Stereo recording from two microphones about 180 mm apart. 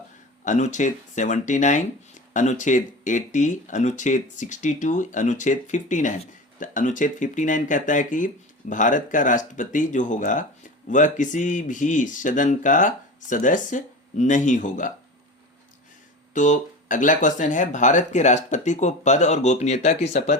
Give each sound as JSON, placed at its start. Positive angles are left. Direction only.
{"t": 0.4, "sound": "speech", "side_deg": 45}
{"t": 16.3, "sound": "speech", "side_deg": 45}